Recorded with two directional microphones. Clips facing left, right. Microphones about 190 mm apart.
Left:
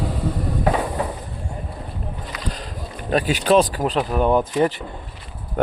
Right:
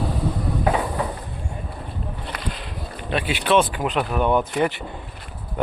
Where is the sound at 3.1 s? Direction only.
40° left (ahead or behind).